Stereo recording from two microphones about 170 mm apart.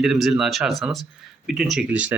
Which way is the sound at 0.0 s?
Centre (ahead or behind).